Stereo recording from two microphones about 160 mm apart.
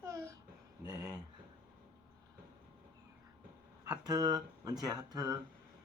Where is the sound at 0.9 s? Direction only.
25° right (ahead or behind).